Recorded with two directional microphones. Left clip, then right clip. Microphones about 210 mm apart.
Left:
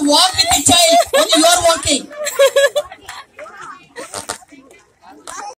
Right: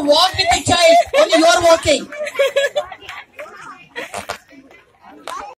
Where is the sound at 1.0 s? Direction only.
20° left (ahead or behind).